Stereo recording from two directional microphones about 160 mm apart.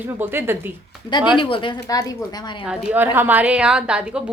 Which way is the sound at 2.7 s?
10° right (ahead or behind).